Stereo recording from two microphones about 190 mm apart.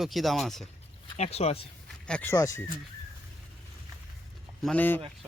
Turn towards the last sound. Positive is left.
turn(degrees=10)  # may be behind; listen again after turning